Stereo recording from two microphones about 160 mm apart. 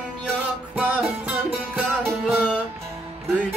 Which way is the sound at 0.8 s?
10° right (ahead or behind).